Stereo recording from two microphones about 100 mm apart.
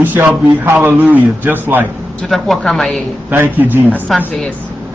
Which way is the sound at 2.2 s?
Centre (ahead or behind).